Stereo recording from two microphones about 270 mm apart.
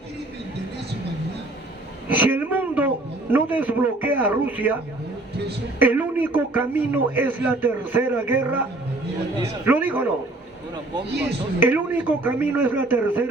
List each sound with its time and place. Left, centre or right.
2.0 s a sound: centre
5.8 s a man's voice: centre
9.6 s a man's voice: centre
11.6 s a man's voice: centre